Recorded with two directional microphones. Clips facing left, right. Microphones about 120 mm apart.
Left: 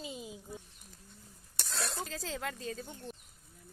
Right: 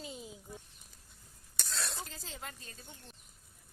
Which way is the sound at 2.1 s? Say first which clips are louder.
Left 8 dB; 90° left.